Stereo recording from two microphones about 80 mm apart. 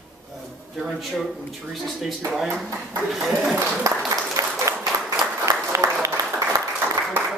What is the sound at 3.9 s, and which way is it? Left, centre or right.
Applause, right.